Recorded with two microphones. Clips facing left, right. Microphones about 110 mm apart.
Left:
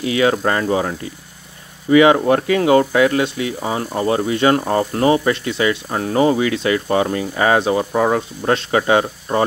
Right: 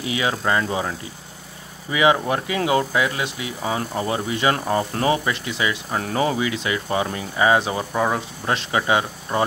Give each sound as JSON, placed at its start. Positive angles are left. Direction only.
{"t": 0.0, "sound": "speech", "side_deg": 50}
{"t": 3.6, "sound": "speech", "side_deg": 40}
{"t": 4.1, "sound": "speech", "side_deg": 50}
{"t": 6.0, "sound": "speech", "side_deg": 40}